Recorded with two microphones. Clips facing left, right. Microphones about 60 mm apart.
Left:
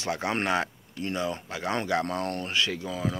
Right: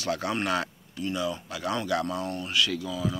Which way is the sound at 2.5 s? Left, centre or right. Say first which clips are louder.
Right 1 dB; left.